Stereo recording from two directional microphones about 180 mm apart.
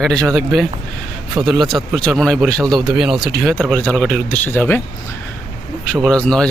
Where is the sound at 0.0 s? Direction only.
Centre (ahead or behind).